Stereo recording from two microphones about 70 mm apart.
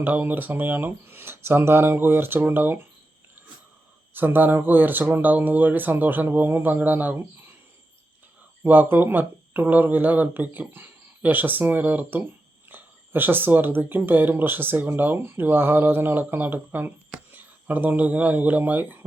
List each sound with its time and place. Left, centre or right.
0.0 s speech: right
4.1 s speech: right
8.6 s speech: right